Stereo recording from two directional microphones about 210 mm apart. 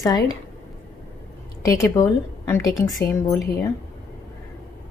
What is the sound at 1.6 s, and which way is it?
A woman's voice, 15° left (ahead or behind).